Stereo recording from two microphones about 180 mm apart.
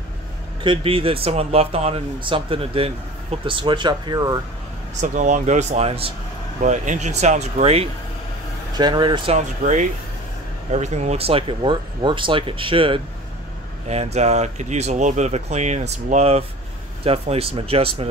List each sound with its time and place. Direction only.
0.7 s speech: 30° right (ahead or behind)
5.0 s speech: 45° right (ahead or behind)
6.6 s speech: 45° right (ahead or behind)
8.7 s speech: 25° right (ahead or behind)
9.6 s speech: 50° right (ahead or behind)
10.7 s speech: 40° right (ahead or behind)